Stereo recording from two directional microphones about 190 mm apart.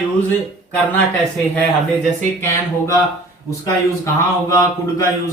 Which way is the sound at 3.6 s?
15° left (ahead or behind).